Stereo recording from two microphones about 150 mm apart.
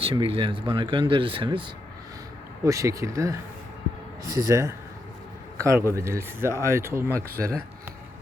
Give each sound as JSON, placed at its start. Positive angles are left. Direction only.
{"t": 0.0, "sound": "speech", "side_deg": -35}
{"t": 2.6, "sound": "speech", "side_deg": -20}